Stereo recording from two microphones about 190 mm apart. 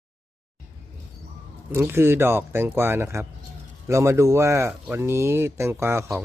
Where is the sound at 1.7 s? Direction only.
15° right (ahead or behind).